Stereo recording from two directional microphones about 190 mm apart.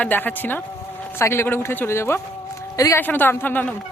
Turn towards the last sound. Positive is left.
turn(degrees=10)  # may be behind; listen again after turning